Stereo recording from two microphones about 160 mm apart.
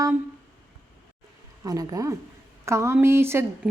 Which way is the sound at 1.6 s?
20° right (ahead or behind).